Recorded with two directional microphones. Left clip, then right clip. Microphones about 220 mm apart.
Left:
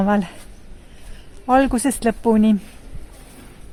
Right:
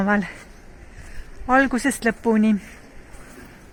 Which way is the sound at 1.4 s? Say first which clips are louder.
Left 2 dB; 15° left (ahead or behind).